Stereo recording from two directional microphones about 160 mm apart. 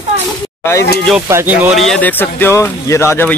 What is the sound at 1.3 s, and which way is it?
Speech, 15° right (ahead or behind).